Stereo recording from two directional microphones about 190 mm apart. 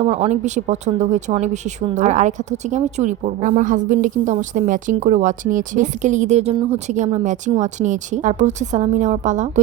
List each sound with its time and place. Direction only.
0.0 s speech: 35° right (ahead or behind)